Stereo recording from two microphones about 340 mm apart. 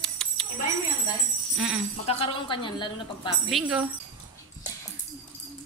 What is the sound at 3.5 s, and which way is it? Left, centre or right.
Speech, centre.